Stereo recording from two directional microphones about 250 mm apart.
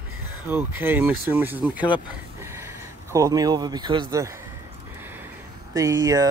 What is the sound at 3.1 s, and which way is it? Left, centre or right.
Speech, centre.